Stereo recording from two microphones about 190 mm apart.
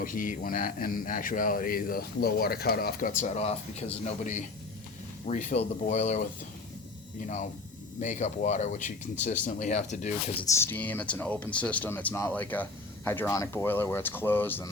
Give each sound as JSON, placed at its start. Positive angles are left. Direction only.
{"t": 0.0, "sound": "speech", "side_deg": 45}
{"t": 8.0, "sound": "speech", "side_deg": 40}
{"t": 10.4, "sound": "speech", "side_deg": 15}